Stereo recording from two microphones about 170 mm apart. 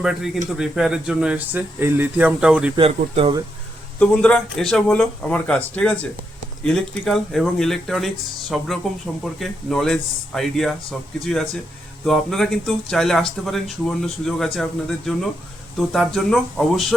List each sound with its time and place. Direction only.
0.0 s speech: 5° right (ahead or behind)
2.7 s speech: 35° right (ahead or behind)
4.0 s speech: 5° left (ahead or behind)
12.0 s speech: centre (ahead or behind)